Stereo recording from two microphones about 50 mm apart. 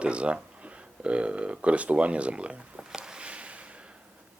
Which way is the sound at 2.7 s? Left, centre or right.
Centre.